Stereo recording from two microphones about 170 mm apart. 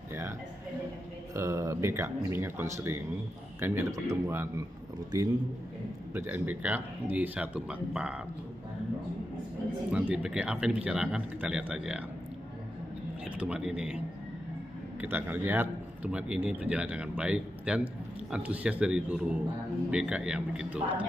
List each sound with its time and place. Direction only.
1.3 s a man's voice: 20° right (ahead or behind)
9.8 s speech: 5° right (ahead or behind)
13.2 s a man's voice: 5° right (ahead or behind)